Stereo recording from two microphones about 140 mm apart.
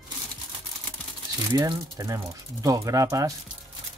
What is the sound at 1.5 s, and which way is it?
Speech, 30° right (ahead or behind).